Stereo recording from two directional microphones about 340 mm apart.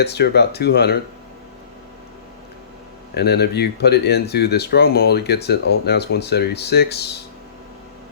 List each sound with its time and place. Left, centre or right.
0.0 s speech: left
3.2 s speech: left